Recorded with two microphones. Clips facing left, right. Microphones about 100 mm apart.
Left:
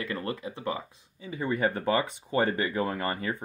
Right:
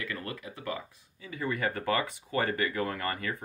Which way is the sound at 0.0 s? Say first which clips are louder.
Left 5 dB; 30° left (ahead or behind).